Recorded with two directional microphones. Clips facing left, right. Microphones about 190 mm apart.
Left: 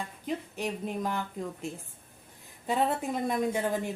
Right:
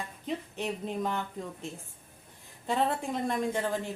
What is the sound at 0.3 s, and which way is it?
Speech, 5° left (ahead or behind).